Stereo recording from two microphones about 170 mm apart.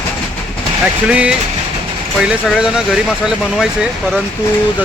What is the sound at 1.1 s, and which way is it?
Speech, 5° right (ahead or behind).